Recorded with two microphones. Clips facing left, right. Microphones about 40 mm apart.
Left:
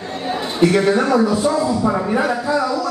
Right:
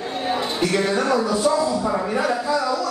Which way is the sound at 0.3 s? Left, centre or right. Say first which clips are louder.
Left 6 dB; centre.